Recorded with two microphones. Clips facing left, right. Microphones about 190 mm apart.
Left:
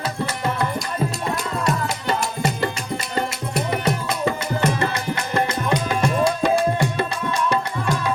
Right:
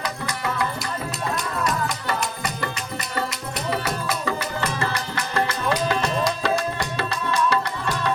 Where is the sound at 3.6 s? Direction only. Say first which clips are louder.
Even; 20° left (ahead or behind).